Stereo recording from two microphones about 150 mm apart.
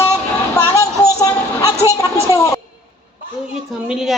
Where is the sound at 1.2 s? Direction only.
25° left (ahead or behind).